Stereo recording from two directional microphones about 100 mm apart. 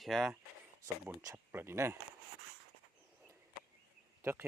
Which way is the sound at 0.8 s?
30° right (ahead or behind).